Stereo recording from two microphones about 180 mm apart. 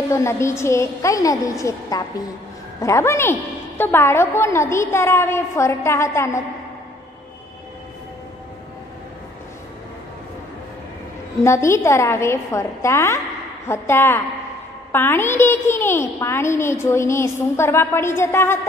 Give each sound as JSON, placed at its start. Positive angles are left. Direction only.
{"t": 0.1, "sound": "a child's voice", "side_deg": 15}
{"t": 11.4, "sound": "a child's voice", "side_deg": 15}